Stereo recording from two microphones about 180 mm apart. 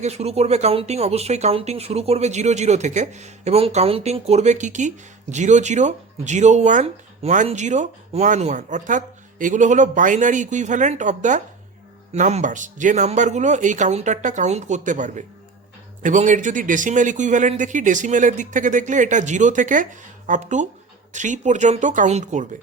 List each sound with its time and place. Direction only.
0.0 s speech: 35° right (ahead or behind)